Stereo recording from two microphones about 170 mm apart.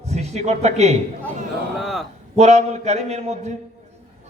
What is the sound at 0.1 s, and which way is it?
Speech, 40° right (ahead or behind).